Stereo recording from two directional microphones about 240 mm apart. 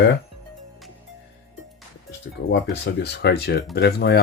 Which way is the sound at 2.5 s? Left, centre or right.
Left.